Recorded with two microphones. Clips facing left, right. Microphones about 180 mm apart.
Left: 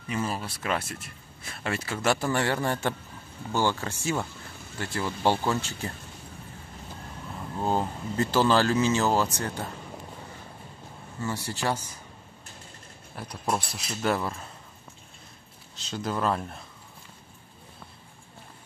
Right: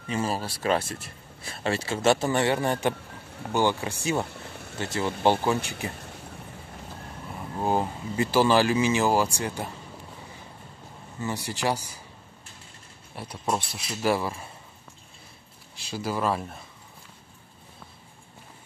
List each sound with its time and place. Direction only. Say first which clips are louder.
0.1 s speech: right 2 dB; 30° right (ahead or behind)
4.3 s vehicle: right 4 dB; 65° right (ahead or behind)
4.9 s speech: right 3 dB; 20° right (ahead or behind)
7.6 s speech: right 1 dB; 10° right (ahead or behind)
11.1 s speech: right 1 dB; 15° right (ahead or behind)
13.1 s speech: right 1 dB; 5° right (ahead or behind)
15.7 s speech: right 1 dB; 10° right (ahead or behind)